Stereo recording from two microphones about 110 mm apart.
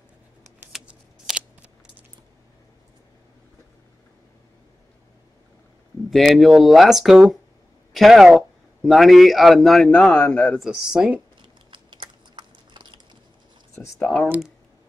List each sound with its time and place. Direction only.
0.7 s shuffling cards: 10° right (ahead or behind)
6.0 s speech: centre (ahead or behind)
9.8 s speech: 15° left (ahead or behind)
10.6 s speech: 5° right (ahead or behind)
11.7 s biting: 45° right (ahead or behind)
13.7 s speech: 25° left (ahead or behind)
14.0 s speech: 10° left (ahead or behind)